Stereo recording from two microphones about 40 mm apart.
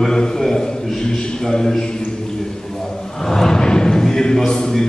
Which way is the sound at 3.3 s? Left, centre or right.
Centre.